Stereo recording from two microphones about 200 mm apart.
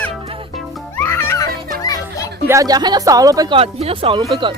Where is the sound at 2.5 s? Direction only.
15° right (ahead or behind).